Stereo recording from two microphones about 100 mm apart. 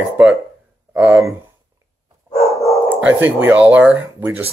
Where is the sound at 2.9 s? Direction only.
20° right (ahead or behind).